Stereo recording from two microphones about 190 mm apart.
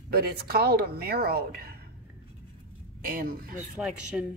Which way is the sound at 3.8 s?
5° right (ahead or behind).